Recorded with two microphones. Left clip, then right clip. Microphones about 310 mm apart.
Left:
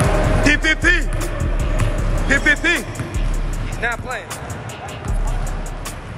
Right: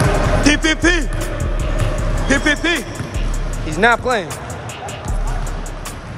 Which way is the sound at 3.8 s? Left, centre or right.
Centre.